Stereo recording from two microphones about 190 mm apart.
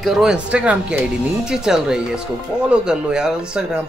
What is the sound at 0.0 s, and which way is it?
Speech, centre (ahead or behind).